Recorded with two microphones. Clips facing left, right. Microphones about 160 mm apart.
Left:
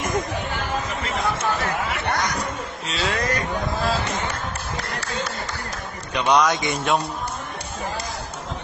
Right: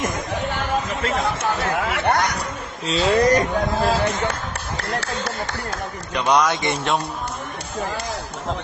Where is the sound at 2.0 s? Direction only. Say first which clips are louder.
Right 6 dB; 55° right (ahead or behind).